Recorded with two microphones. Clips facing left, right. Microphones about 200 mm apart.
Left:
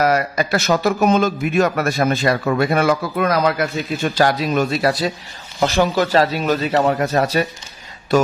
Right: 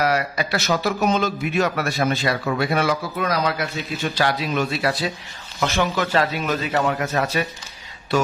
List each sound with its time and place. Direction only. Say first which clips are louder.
0.0 s a man's voice: left 4 dB; 45° left (ahead or behind)